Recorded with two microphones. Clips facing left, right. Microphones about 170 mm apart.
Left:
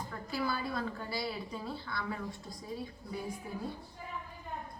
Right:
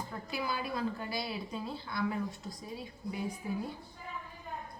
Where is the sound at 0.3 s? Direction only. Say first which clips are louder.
Left 2 dB; 15° right (ahead or behind).